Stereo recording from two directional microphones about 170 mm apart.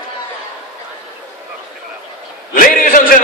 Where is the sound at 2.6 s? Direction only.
55° left (ahead or behind).